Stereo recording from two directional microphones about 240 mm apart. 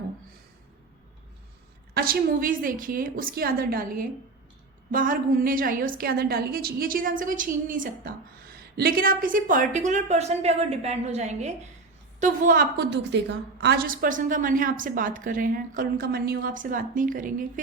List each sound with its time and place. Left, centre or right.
1.9 s a woman's voice: right